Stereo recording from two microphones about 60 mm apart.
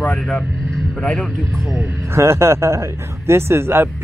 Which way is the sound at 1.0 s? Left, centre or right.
Centre.